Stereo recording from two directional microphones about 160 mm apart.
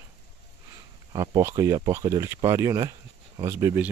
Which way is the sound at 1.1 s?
25° right (ahead or behind).